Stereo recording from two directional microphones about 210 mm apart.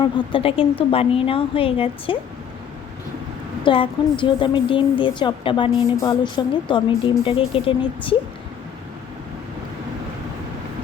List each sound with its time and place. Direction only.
0.0 s a woman's voice: 25° left (ahead or behind)
3.6 s a woman's voice: 25° left (ahead or behind)